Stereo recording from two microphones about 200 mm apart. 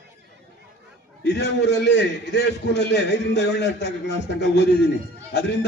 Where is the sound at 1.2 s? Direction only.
55° left (ahead or behind).